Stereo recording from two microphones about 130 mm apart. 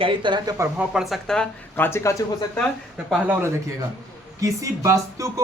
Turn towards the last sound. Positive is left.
turn(degrees=-25)  # may be behind; listen again after turning